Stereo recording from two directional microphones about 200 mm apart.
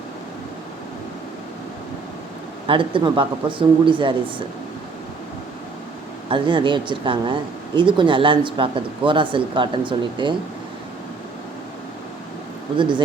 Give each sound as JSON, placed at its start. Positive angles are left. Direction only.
{"t": 2.6, "sound": "speech", "side_deg": -25}
{"t": 6.3, "sound": "speech", "side_deg": -25}
{"t": 12.7, "sound": "speech", "side_deg": -25}